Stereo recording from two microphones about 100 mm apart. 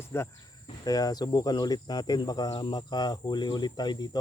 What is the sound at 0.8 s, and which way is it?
Cricket, 40° left (ahead or behind).